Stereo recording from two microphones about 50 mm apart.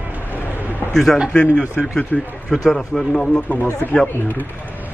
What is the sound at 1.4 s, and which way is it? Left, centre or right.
Speech, centre.